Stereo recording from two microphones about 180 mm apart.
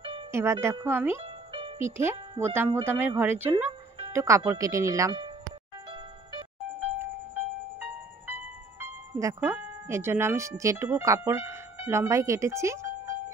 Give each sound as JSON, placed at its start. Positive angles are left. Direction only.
{"t": 0.3, "sound": "speech", "side_deg": -15}
{"t": 1.2, "sound": "music", "side_deg": -30}
{"t": 1.8, "sound": "speech", "side_deg": -15}
{"t": 6.8, "sound": "music", "side_deg": -10}
{"t": 8.3, "sound": "speech", "side_deg": -10}